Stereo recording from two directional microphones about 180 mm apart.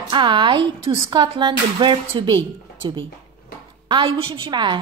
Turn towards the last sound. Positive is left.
turn(degrees=-25)  # may be behind; listen again after turning